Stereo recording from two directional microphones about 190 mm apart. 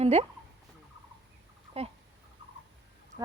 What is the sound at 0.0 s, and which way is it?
Speech, 35° right (ahead or behind).